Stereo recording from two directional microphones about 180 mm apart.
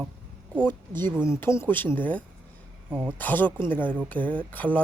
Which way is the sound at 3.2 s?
10° left (ahead or behind).